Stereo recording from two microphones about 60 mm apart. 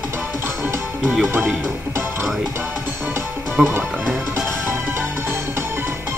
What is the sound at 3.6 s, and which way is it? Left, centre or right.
Speech, centre.